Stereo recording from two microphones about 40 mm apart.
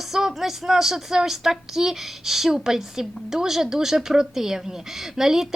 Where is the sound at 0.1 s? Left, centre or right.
Centre.